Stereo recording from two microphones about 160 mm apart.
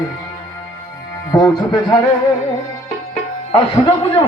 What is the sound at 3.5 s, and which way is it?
Speech, 35° left (ahead or behind).